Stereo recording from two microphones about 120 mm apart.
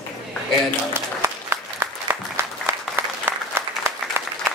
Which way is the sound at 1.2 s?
20° right (ahead or behind).